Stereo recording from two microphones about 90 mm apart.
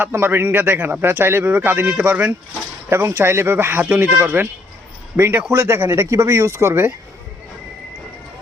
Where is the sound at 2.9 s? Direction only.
30° right (ahead or behind).